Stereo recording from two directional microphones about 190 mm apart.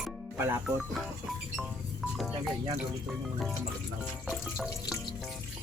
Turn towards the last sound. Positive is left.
turn(degrees=-5)  # may be behind; listen again after turning